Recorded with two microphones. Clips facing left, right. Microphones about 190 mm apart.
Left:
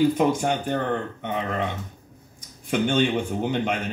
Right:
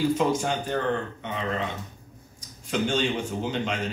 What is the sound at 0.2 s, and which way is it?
Speech, 55° left (ahead or behind).